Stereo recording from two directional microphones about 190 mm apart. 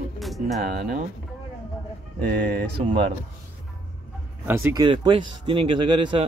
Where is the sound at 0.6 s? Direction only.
50° right (ahead or behind).